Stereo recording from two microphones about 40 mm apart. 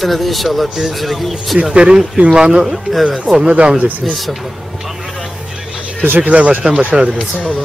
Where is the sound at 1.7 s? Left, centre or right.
Right.